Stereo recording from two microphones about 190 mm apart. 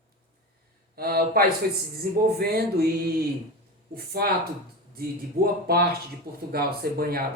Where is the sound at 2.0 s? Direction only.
55° right (ahead or behind).